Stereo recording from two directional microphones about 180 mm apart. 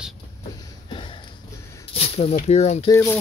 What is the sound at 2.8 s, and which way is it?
Speech, 15° left (ahead or behind).